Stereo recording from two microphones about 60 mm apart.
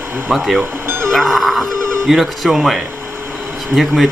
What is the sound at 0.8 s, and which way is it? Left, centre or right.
Music, right.